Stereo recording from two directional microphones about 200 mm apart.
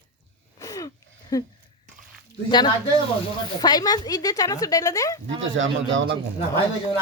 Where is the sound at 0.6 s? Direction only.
15° left (ahead or behind).